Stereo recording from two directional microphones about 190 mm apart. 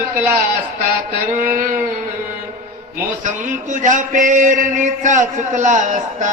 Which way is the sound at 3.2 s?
40° right (ahead or behind).